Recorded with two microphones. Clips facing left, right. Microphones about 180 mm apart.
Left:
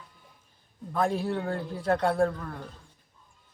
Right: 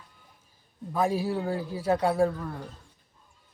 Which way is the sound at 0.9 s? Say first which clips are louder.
Right 1 dB; 5° right (ahead or behind).